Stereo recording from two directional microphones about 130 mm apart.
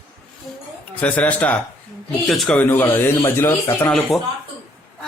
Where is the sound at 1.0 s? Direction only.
10° left (ahead or behind).